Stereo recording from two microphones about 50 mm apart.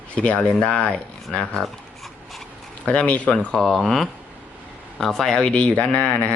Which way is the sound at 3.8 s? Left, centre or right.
Centre.